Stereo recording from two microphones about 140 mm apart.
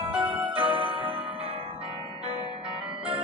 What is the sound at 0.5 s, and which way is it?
Music, 35° right (ahead or behind).